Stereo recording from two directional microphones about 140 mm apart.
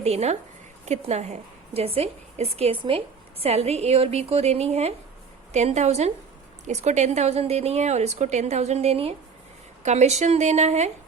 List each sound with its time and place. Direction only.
0.0 s a woman's voice: 50° right (ahead or behind)